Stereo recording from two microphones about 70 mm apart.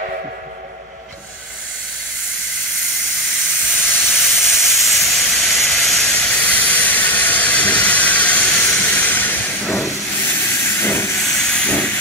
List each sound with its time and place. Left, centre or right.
3.7 s steam: centre
6.1 s steam: left
8.7 s train: left
9.6 s hiss: centre
10.2 s steam: left
11.1 s hiss: centre